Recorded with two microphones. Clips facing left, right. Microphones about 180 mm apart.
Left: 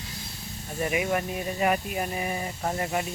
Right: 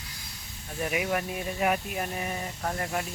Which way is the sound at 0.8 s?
5° right (ahead or behind).